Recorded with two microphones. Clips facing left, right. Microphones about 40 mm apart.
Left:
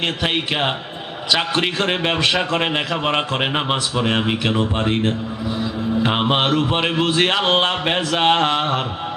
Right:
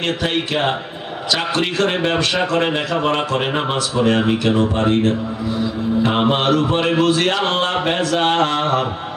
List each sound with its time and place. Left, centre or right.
0.2 s speech: left
6.0 s speech: left